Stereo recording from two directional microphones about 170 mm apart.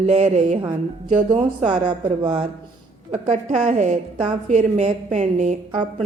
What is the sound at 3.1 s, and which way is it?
A woman's voice, 45° right (ahead or behind).